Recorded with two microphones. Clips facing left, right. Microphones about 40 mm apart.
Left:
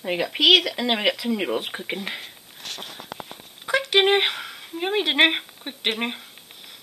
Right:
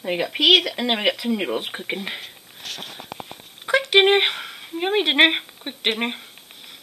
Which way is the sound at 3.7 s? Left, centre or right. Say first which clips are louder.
Right 3 dB; centre.